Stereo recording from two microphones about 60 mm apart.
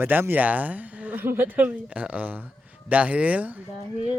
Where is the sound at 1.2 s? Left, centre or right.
Right.